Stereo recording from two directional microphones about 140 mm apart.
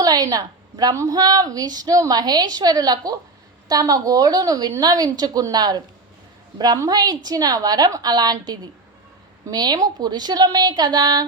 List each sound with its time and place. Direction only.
0.0 s a woman's voice: 25° right (ahead or behind)